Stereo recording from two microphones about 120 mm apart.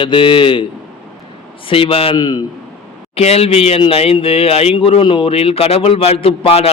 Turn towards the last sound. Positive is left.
turn(degrees=55)  # may be behind; listen again after turning